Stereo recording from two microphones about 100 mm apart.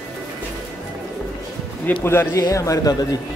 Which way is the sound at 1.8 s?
20° left (ahead or behind).